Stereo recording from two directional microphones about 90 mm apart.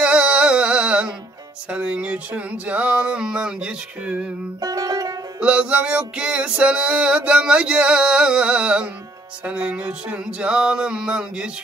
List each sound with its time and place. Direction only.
0.0 s music: 10° right (ahead or behind)
4.6 s music: 45° right (ahead or behind)
5.4 s music: 15° right (ahead or behind)